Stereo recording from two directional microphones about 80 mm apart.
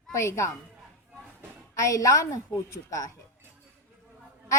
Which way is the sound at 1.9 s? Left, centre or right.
Left.